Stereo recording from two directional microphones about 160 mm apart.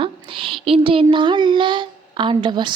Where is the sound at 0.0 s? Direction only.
35° right (ahead or behind).